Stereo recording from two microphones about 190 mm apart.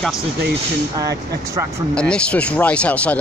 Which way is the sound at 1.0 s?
20° right (ahead or behind).